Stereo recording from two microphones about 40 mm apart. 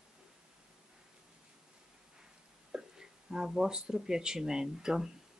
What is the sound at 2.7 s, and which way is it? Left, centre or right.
Speech, centre.